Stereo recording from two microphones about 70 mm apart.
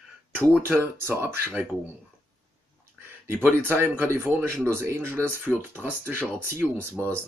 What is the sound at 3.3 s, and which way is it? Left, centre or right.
Speech, right.